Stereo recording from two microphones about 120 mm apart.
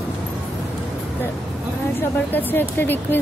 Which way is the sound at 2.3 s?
15° left (ahead or behind).